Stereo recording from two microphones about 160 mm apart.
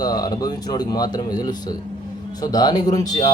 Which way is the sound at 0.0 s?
25° left (ahead or behind).